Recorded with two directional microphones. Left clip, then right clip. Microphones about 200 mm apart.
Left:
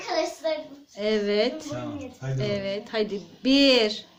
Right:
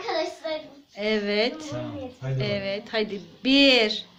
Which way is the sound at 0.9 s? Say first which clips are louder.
Left 1 dB; 5° left (ahead or behind).